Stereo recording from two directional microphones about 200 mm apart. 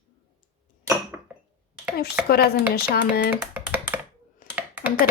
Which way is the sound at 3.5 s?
10° right (ahead or behind).